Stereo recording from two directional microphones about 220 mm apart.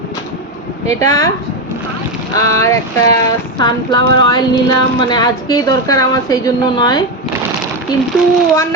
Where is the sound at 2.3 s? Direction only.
15° left (ahead or behind).